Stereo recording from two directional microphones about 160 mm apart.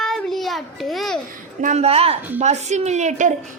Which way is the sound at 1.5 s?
45° right (ahead or behind).